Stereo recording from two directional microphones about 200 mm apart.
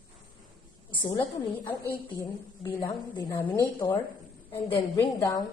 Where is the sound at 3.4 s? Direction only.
10° left (ahead or behind).